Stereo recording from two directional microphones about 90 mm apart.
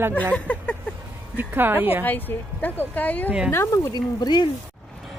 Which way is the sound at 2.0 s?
20° left (ahead or behind).